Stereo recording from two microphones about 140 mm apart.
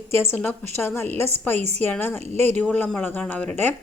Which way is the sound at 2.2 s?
50° right (ahead or behind).